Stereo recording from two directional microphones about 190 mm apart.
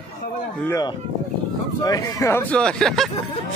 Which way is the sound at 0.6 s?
15° left (ahead or behind).